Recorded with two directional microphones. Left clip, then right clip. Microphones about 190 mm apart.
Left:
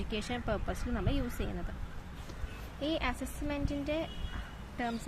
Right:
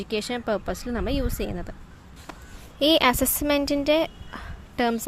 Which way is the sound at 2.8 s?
60° right (ahead or behind).